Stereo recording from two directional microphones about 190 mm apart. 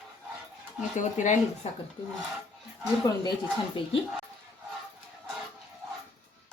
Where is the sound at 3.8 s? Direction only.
25° left (ahead or behind).